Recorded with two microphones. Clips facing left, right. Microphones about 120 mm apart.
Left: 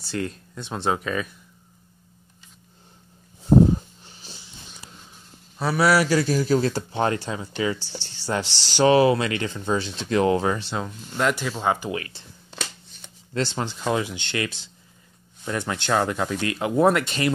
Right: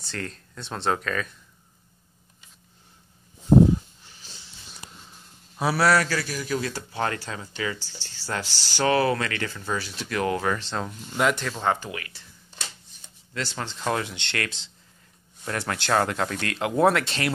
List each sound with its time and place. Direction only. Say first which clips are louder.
0.1 s speech: left 6 dB; 10° left (ahead or behind)
4.0 s a sound: left 4 dB; 20° left (ahead or behind)
5.6 s speech: left 1 dB; 10° right (ahead or behind)
6.0 s speech: left 8 dB; 25° left (ahead or behind)
10.7 s speech: left 1 dB; centre (ahead or behind)
11.9 s speech: left 7 dB; 25° left (ahead or behind)
12.4 s shuffling cards: left 6 dB; 85° left
13.3 s speech: left 6 dB; 25° left (ahead or behind)
13.7 s speech: left 1 dB; 5° left (ahead or behind)